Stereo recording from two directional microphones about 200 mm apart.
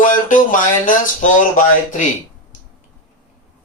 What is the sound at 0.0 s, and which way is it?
Speech, 40° left (ahead or behind).